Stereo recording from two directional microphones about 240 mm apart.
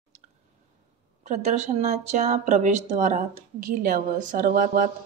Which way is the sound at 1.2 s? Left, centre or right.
Right.